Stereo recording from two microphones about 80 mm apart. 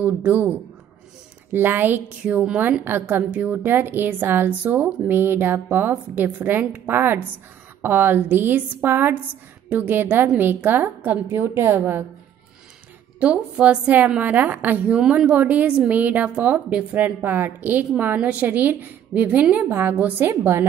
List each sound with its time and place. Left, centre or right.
0.0 s a woman's voice: right
13.2 s a woman's voice: centre
15.0 s a woman's voice: centre; by 20.6 s right